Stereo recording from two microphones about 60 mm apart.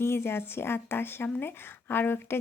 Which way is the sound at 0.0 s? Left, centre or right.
Left.